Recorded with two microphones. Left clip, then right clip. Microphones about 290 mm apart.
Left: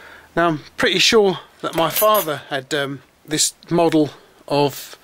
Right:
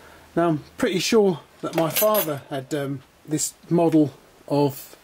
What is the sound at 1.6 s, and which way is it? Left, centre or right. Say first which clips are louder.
Speech: left 4 dB; centre.